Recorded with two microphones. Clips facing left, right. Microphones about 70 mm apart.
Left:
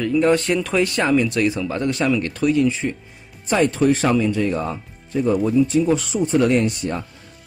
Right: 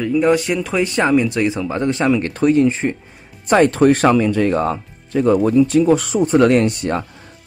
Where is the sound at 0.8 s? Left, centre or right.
Right.